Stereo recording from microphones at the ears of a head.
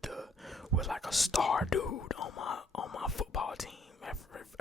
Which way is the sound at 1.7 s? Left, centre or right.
Left.